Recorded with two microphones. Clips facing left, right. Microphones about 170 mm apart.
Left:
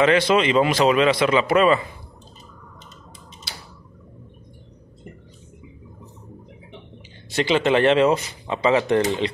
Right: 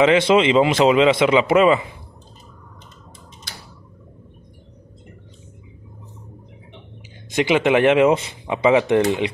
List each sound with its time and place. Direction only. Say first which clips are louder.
0.0 s a man's voice: right 3 dB; 20° right (ahead or behind)
7.3 s speech: right 2 dB; 15° right (ahead or behind)